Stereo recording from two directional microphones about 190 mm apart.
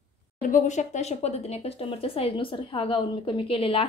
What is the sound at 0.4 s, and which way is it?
A woman's voice, 45° left (ahead or behind).